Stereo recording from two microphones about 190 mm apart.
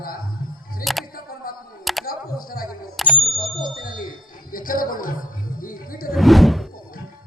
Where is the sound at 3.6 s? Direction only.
45° left (ahead or behind).